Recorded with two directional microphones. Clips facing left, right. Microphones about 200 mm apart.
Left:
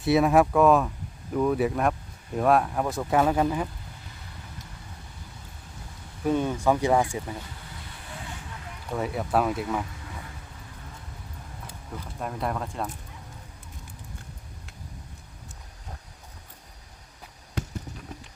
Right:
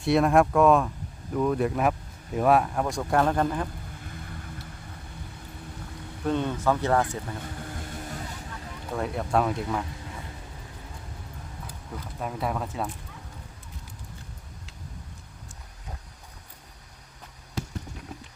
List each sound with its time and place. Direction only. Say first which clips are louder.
0.0 s speech: left 1 dB; centre (ahead or behind)
6.2 s speech: left 2 dB; 10° left (ahead or behind)
7.4 s vehicle: right 7 dB; 50° right (ahead or behind)
8.9 s speech: even; centre (ahead or behind)
12.2 s speech: even; centre (ahead or behind)